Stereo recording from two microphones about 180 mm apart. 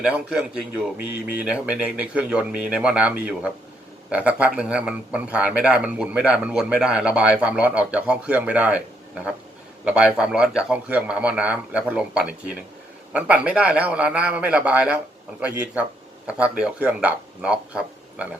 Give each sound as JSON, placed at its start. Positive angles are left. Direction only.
{"t": 0.0, "sound": "a man's voice", "side_deg": -5}